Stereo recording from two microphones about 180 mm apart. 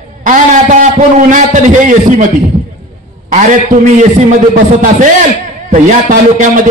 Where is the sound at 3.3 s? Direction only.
45° right (ahead or behind).